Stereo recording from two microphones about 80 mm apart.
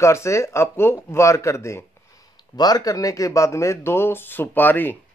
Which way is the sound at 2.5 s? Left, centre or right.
Left.